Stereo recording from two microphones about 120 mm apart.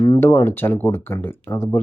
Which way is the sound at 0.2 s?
20° left (ahead or behind).